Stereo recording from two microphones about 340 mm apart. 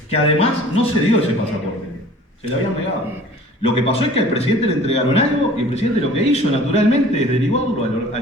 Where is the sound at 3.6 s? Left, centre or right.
Centre.